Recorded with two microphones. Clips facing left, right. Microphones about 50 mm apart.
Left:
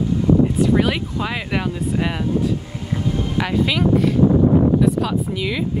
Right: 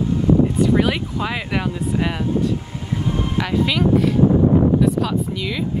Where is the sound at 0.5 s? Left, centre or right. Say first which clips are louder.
Even; centre.